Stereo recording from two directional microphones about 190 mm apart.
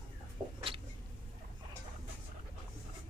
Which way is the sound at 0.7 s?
30° right (ahead or behind).